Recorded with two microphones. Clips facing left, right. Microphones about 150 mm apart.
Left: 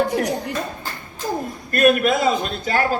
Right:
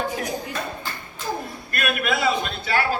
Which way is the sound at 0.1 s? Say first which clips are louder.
Left 6 dB; 70° left (ahead or behind).